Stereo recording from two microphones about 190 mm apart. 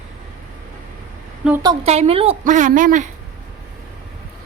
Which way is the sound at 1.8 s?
35° right (ahead or behind).